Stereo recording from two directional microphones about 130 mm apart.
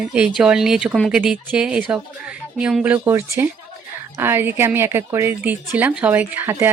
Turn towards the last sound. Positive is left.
turn(degrees=-15)  # may be behind; listen again after turning